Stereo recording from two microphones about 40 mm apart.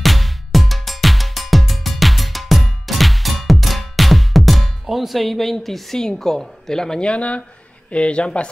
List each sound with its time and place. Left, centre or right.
0.0 s music: centre
5.9 s a woman's voice: centre
7.1 s speech: left